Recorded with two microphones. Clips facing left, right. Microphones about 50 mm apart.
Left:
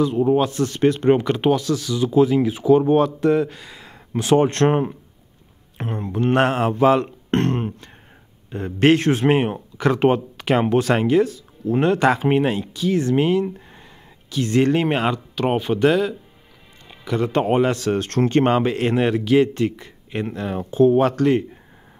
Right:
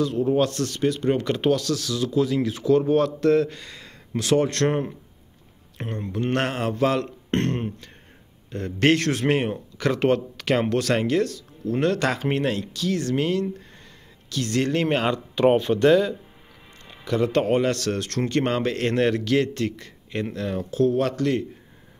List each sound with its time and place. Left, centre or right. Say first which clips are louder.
0.0 s speech: left 3 dB; centre
0.7 s speech: left 6 dB; left
1.1 s speech: left 4 dB; centre
4.2 s speech: left 4 dB; left
5.8 s speech: left 4 dB; centre
18.0 s speech: left 7 dB; left
18.6 s speech: left 3 dB; centre